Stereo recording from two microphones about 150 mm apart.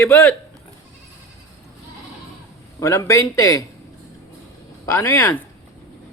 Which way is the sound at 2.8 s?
20° left (ahead or behind).